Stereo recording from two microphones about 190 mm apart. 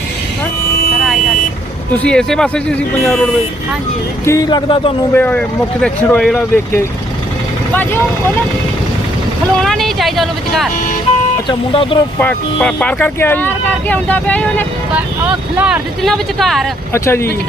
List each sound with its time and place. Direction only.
1.9 s speech: 5° left (ahead or behind)
4.3 s speech: 20° left (ahead or behind)
5.1 s speech: 10° left (ahead or behind)
9.6 s speech: centre (ahead or behind)
11.4 s speech: 25° left (ahead or behind)
12.2 s speech: 10° left (ahead or behind)
15.5 s speech: 5° right (ahead or behind)
16.9 s speech: 15° left (ahead or behind)